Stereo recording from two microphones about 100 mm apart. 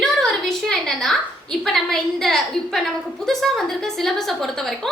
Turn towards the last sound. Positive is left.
turn(degrees=0)  # may be behind; listen again after turning